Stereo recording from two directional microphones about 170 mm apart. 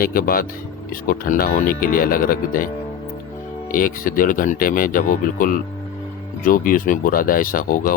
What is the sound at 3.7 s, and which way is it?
Speech, 55° left (ahead or behind).